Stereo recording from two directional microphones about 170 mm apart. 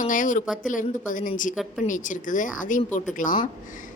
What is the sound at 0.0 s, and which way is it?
Speech, 50° left (ahead or behind).